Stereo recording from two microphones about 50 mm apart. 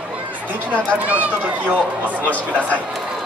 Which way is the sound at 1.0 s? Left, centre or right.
Right.